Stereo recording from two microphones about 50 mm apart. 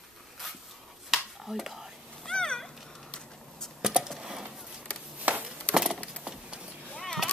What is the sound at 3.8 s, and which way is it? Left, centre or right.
Typing, centre.